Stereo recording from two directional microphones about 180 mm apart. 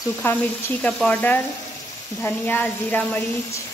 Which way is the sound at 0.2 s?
10° left (ahead or behind).